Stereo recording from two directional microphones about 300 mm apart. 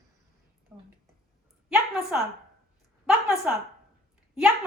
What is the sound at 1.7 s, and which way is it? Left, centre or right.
A woman's voice, centre.